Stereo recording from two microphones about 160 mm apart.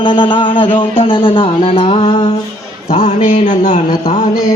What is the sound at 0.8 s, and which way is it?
Music, 35° left (ahead or behind).